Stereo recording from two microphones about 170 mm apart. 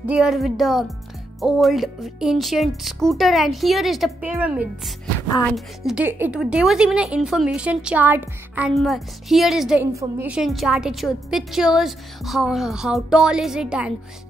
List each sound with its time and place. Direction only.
0.0 s a woman's voice: 5° right (ahead or behind)
9.9 s a woman's voice: 15° right (ahead or behind)
10.3 s a woman's voice: centre (ahead or behind)